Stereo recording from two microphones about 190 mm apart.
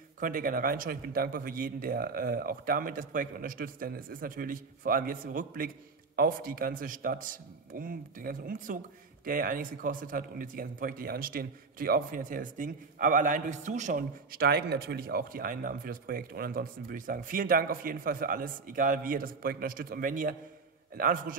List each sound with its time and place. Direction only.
0.2 s a man's voice: 50° right (ahead or behind)